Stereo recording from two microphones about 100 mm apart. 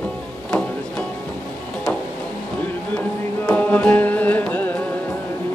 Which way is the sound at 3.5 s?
15° left (ahead or behind).